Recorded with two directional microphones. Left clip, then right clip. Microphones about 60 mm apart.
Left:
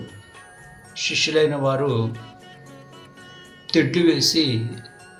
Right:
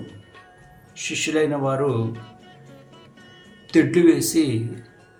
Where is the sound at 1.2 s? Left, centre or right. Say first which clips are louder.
Left 1 dB; centre.